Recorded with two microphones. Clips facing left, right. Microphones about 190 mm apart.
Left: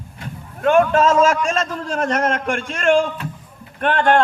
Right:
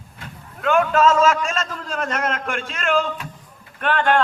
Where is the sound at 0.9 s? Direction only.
30° left (ahead or behind).